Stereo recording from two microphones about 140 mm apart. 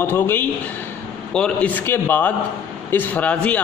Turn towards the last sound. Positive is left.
turn(degrees=10)  # may be behind; listen again after turning